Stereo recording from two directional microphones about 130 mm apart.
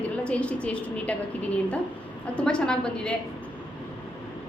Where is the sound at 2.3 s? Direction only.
5° left (ahead or behind).